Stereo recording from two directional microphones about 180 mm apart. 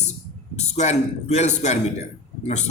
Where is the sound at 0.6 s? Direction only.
40° left (ahead or behind).